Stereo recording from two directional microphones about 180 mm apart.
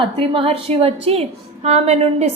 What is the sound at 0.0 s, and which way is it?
A woman's voice, 30° right (ahead or behind).